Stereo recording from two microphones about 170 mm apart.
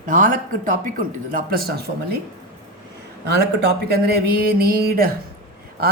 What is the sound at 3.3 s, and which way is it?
Speech, 75° right (ahead or behind).